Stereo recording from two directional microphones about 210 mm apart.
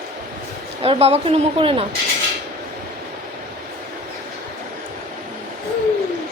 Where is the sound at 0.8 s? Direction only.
30° right (ahead or behind).